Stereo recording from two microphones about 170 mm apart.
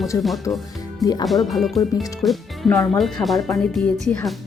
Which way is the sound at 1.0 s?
20° left (ahead or behind).